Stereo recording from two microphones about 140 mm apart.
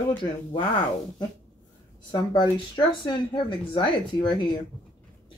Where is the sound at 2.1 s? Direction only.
30° left (ahead or behind).